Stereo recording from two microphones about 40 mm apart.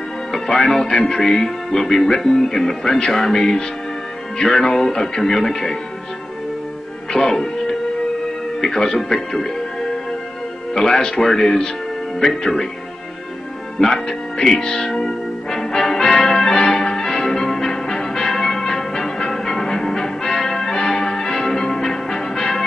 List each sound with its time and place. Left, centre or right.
0.6 s speech: centre
7.1 s speech: centre
8.5 s speech: centre
13.7 s speech: centre
14.9 s music: centre